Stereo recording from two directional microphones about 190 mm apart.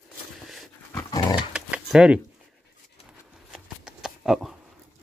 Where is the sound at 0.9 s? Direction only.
15° left (ahead or behind).